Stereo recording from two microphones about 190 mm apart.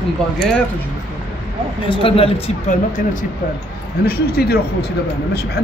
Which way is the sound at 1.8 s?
30° left (ahead or behind).